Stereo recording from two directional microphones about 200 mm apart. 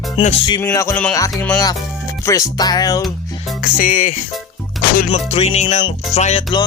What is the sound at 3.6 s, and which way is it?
Speech, 45° left (ahead or behind).